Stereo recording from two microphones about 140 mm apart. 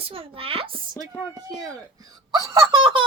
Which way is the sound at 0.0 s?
40° right (ahead or behind).